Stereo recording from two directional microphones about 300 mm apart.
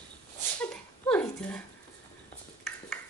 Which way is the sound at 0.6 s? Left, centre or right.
Centre.